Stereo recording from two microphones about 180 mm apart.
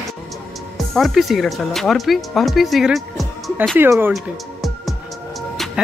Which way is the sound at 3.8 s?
10° right (ahead or behind).